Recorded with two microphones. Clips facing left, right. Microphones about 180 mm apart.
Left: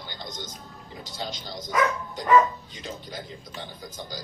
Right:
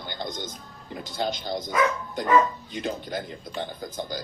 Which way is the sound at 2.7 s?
55° right (ahead or behind).